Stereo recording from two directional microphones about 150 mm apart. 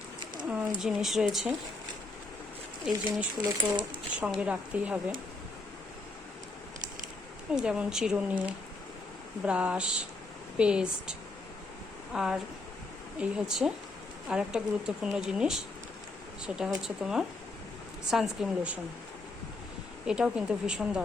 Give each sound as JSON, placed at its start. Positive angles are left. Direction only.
{"t": 0.4, "sound": "speech", "side_deg": -10}
{"t": 2.9, "sound": "speech", "side_deg": -5}
{"t": 3.3, "sound": "speech", "side_deg": -30}
{"t": 4.4, "sound": "speech", "side_deg": -10}
{"t": 7.5, "sound": "speech", "side_deg": -5}
{"t": 16.6, "sound": "speech", "side_deg": -5}
{"t": 20.1, "sound": "speech", "side_deg": -5}